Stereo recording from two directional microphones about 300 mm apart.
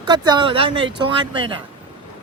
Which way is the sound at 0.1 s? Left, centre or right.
Centre.